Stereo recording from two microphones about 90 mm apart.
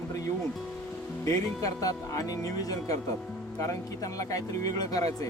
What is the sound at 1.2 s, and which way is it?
Speech, 35° left (ahead or behind).